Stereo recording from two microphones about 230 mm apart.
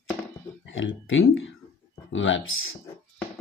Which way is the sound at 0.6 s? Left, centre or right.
Left.